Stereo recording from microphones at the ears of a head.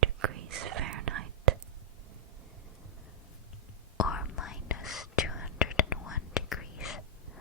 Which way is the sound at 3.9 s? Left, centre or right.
Left.